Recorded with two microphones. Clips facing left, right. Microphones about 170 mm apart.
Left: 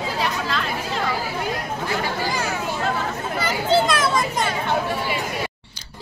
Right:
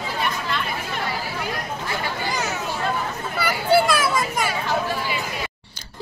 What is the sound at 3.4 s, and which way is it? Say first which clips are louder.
Children playing: right 1 dB; 20° left (ahead or behind).